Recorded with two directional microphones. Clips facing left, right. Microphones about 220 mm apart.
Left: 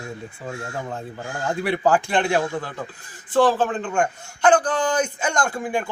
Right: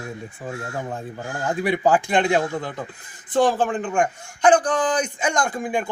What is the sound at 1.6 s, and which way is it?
Speech, 15° right (ahead or behind).